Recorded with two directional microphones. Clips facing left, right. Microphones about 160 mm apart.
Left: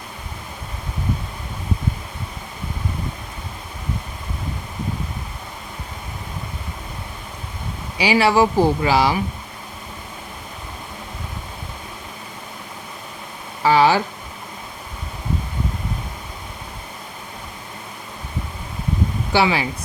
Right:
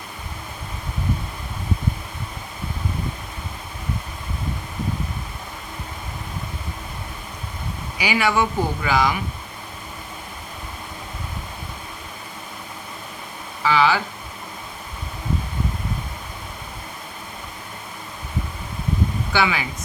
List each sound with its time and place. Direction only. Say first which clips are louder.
7.9 s speech: left 5 dB; 30° left (ahead or behind)
13.6 s speech: left 4 dB; 40° left (ahead or behind)
19.3 s speech: left 5 dB; 30° left (ahead or behind)